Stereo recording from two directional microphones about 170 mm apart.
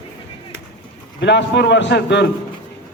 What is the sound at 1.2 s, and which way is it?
A man's voice, 90° left.